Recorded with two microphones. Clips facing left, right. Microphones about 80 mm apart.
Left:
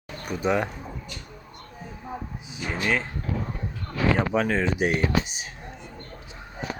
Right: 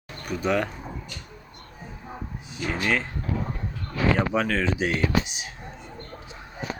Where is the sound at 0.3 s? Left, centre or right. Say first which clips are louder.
Even; centre.